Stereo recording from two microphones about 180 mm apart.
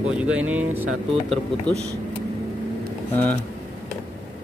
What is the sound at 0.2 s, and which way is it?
Speech, 5° right (ahead or behind).